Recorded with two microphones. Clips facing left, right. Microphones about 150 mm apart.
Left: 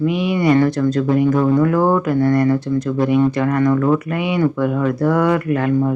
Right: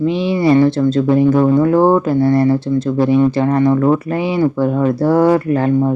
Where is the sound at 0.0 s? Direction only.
30° right (ahead or behind).